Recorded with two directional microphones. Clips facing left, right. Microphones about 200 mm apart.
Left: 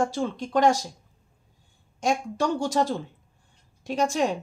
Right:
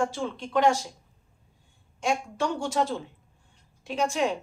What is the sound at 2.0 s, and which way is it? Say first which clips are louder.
Speech: left 2 dB; 40° left (ahead or behind).